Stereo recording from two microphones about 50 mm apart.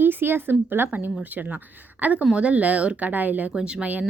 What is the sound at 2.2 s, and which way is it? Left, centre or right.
Speech, centre.